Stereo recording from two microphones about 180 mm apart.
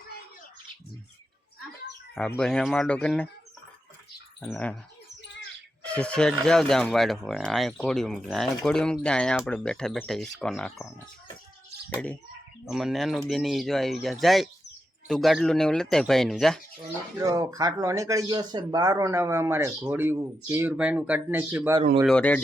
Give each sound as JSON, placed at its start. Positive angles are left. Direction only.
{"t": 2.1, "sound": "speech", "side_deg": 5}
{"t": 4.4, "sound": "speech", "side_deg": 0}
{"t": 5.8, "sound": "speech", "side_deg": 5}
{"t": 11.9, "sound": "speech", "side_deg": 10}
{"t": 17.2, "sound": "speech", "side_deg": -20}
{"t": 22.0, "sound": "a man's voice", "side_deg": 5}